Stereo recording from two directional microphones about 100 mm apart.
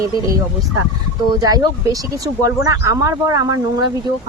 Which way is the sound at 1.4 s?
40° right (ahead or behind).